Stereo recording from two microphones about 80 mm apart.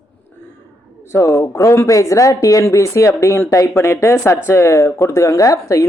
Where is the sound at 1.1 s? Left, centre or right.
Left.